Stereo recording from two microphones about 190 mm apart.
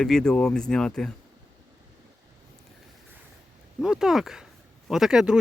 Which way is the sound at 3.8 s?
5° right (ahead or behind).